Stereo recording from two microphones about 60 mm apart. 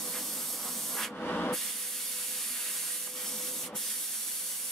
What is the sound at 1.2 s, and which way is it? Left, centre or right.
Spray, left.